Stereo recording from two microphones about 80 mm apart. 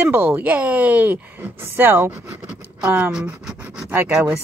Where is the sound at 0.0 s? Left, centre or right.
Right.